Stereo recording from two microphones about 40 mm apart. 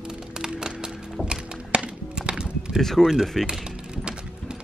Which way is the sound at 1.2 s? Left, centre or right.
Right.